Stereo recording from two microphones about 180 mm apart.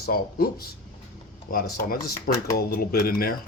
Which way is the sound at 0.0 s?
55° left (ahead or behind).